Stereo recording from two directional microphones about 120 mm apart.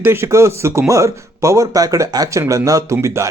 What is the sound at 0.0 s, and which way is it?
Speech, 20° right (ahead or behind).